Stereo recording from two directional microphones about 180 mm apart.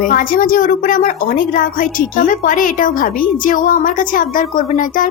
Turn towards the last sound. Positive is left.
turn(degrees=50)  # may be behind; listen again after turning